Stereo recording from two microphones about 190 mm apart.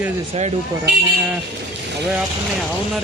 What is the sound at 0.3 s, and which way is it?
Speech, 35° right (ahead or behind).